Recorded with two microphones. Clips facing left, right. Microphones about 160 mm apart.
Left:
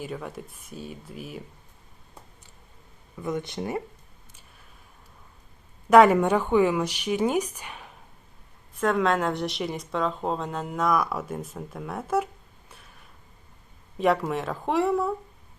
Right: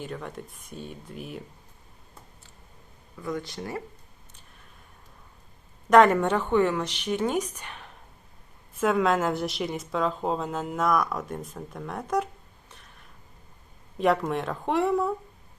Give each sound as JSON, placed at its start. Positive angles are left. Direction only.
{"t": 0.0, "sound": "a woman's voice", "side_deg": 5}
{"t": 3.2, "sound": "speech", "side_deg": 20}
{"t": 5.9, "sound": "a woman's voice", "side_deg": 10}
{"t": 8.8, "sound": "a woman's voice", "side_deg": 0}
{"t": 14.0, "sound": "a woman's voice", "side_deg": 0}